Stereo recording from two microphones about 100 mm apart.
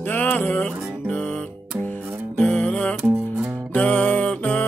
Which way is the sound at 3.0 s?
15° right (ahead or behind).